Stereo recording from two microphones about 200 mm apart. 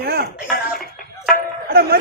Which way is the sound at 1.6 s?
50° right (ahead or behind).